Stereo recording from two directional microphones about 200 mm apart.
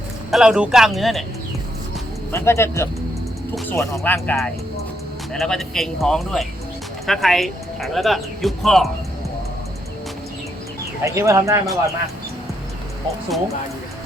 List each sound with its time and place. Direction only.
0.3 s speech: centre (ahead or behind)
2.3 s speech: 15° left (ahead or behind)
11.0 s speech: 15° right (ahead or behind)